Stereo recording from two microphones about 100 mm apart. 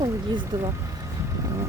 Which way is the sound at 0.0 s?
40° right (ahead or behind).